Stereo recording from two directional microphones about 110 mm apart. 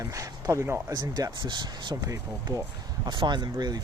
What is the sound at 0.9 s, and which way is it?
Speech, 35° right (ahead or behind).